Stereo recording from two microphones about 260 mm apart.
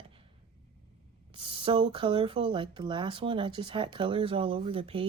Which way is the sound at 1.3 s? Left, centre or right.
Right.